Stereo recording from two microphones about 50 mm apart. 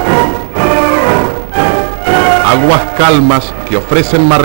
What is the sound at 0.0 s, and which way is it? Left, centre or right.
Music, centre.